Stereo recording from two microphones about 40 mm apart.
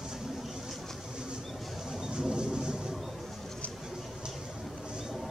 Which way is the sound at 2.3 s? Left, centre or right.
Right.